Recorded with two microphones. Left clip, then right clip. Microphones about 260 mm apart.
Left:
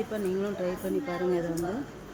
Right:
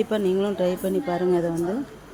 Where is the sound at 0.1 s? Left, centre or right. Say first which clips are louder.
Right 8 dB; right.